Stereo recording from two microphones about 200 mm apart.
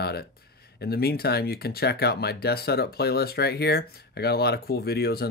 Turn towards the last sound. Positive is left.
turn(degrees=50)  # may be behind; listen again after turning